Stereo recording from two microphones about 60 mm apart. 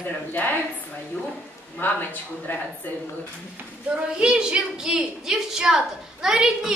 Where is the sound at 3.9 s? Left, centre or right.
Centre.